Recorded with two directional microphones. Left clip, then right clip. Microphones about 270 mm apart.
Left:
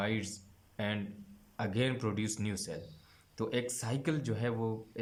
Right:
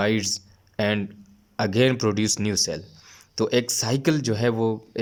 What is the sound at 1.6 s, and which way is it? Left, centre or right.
Speech, right.